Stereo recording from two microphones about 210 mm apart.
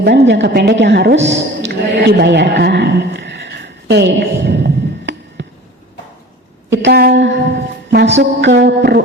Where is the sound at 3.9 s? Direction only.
50° right (ahead or behind).